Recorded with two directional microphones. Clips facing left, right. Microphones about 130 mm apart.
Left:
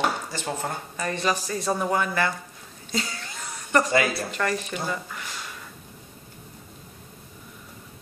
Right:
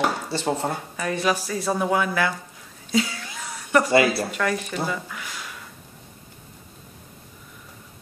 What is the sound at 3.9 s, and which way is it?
Speech, 30° right (ahead or behind).